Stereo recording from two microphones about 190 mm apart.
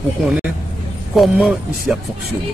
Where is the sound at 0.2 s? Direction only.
5° right (ahead or behind).